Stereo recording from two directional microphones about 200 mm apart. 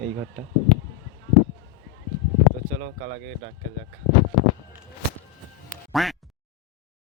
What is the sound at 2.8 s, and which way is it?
Speech, 40° right (ahead or behind).